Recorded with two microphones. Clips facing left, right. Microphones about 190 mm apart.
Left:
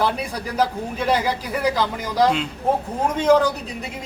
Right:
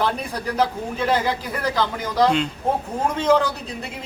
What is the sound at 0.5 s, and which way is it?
A man's voice, 10° left (ahead or behind).